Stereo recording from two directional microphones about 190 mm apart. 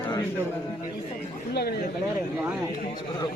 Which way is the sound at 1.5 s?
55° left (ahead or behind).